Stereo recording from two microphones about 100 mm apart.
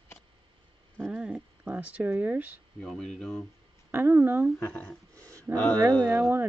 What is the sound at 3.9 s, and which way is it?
Speech, 20° right (ahead or behind).